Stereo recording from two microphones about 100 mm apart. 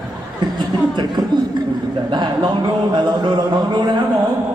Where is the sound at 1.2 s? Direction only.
40° right (ahead or behind).